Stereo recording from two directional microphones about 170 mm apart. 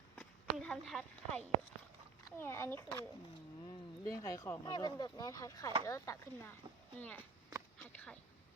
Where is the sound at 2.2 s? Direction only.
15° left (ahead or behind).